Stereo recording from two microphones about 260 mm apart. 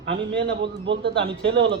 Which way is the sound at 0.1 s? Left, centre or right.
Right.